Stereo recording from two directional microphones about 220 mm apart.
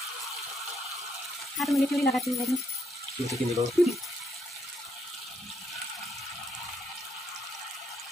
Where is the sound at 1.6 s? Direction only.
Centre (ahead or behind).